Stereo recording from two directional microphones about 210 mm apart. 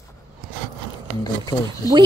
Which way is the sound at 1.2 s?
15° left (ahead or behind).